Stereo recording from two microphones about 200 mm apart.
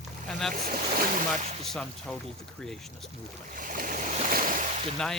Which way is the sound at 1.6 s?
5° left (ahead or behind).